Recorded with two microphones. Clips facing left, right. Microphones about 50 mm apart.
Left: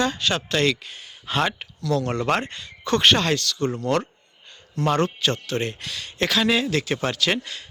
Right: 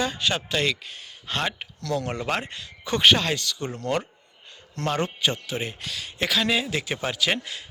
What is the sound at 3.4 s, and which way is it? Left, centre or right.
Speech, centre.